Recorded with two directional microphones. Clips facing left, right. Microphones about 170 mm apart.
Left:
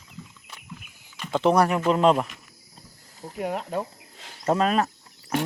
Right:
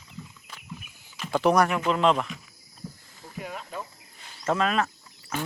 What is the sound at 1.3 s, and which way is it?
Speech, 25° left (ahead or behind).